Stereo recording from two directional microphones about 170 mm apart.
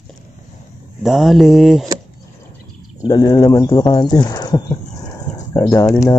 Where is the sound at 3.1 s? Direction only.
25° left (ahead or behind).